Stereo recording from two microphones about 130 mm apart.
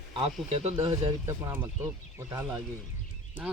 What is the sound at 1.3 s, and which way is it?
Speech, 20° right (ahead or behind).